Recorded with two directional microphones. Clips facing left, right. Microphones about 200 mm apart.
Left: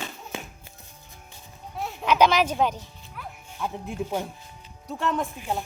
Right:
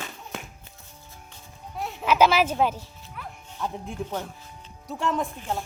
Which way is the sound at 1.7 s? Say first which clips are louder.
Even; centre (ahead or behind).